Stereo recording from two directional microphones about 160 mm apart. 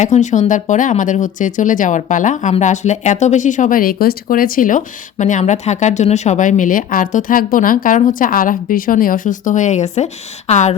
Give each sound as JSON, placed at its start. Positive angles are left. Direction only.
{"t": 0.0, "sound": "speech", "side_deg": 50}